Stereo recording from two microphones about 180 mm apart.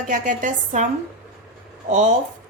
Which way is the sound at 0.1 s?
45° right (ahead or behind).